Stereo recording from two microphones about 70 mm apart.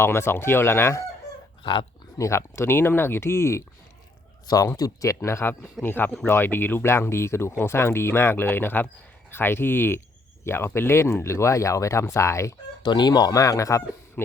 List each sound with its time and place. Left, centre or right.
0.0 s speech: left
2.1 s speech: left
4.4 s speech: left
5.8 s speech: left
12.8 s speech: left